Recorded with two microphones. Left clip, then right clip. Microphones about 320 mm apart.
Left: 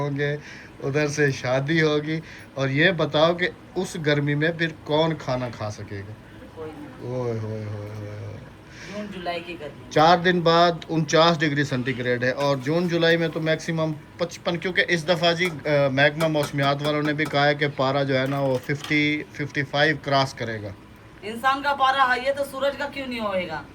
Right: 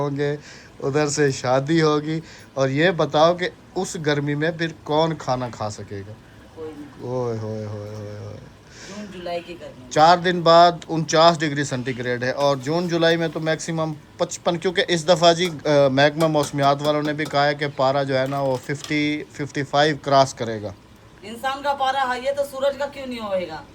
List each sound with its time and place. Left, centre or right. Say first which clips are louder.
0.0 s a man's voice: right 2 dB; centre
7.2 s a man's voice: right 2 dB; centre
8.9 s a sound: even; centre
9.9 s a man's voice: right 2 dB; centre
21.2 s a woman's voice: left 2 dB; centre